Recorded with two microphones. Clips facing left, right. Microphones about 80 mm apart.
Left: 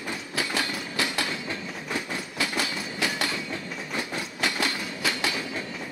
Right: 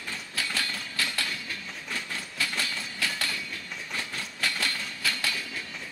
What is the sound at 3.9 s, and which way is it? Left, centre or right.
Train, centre.